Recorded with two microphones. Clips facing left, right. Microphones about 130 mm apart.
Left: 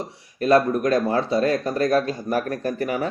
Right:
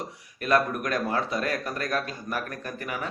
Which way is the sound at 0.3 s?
30° left (ahead or behind).